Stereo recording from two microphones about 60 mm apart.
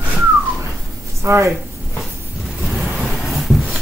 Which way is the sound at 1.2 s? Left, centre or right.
Right.